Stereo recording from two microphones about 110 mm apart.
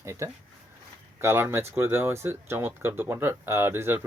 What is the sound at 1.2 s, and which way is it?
Speech, 20° right (ahead or behind).